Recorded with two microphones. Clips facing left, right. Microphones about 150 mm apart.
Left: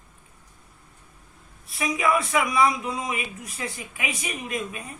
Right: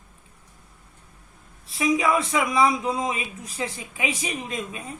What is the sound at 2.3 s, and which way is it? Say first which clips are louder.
Speech: right 1 dB; 30° right (ahead or behind).